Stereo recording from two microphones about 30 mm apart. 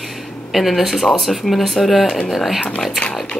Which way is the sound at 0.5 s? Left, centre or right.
Centre.